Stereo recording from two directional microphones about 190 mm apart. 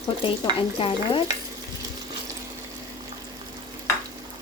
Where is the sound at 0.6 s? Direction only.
30° left (ahead or behind).